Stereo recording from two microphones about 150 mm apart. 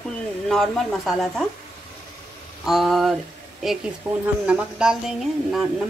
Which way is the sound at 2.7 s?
Centre (ahead or behind).